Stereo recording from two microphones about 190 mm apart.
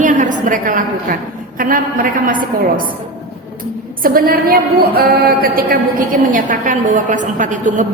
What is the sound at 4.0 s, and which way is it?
A woman's voice, 50° right (ahead or behind).